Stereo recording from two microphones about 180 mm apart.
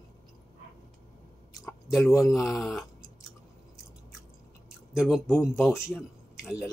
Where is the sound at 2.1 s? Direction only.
20° left (ahead or behind).